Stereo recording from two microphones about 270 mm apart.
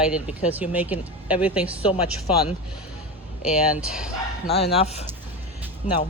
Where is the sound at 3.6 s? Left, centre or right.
Centre.